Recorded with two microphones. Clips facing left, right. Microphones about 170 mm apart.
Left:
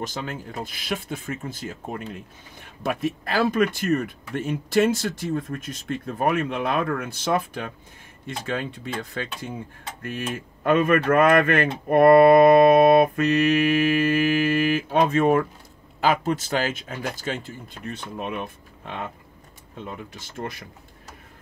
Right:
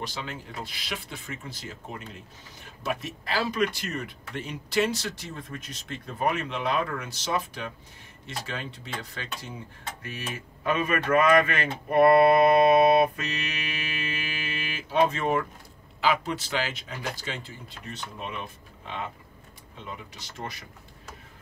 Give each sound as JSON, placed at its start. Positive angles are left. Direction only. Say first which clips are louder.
{"t": 0.0, "sound": "speech", "louder": "left 5 dB", "side_deg": 45}